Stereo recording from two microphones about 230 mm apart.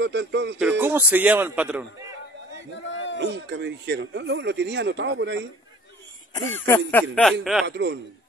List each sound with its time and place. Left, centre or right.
0.0 s speech: right
0.6 s a man's voice: centre
2.7 s a sound: left
3.2 s speech: right
6.3 s a sound: centre
7.6 s speech: right